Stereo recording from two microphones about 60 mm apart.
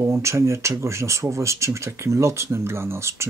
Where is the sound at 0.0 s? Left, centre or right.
Right.